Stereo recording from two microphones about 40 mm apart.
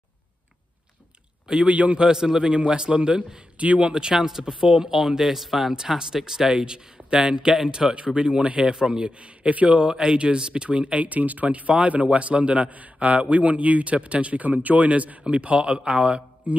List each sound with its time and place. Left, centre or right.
1.7 s speech: right
2.0 s speech: centre
2.4 s a man's voice: right
3.9 s a man's voice: centre
9.1 s speech: right